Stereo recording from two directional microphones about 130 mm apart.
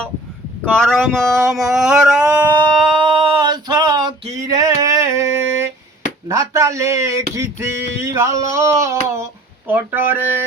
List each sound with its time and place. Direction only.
0.7 s speech: 5° left (ahead or behind)
3.0 s male singing: 40° right (ahead or behind); by 5.2 s 25° right (ahead or behind)
6.2 s speech: 25° right (ahead or behind)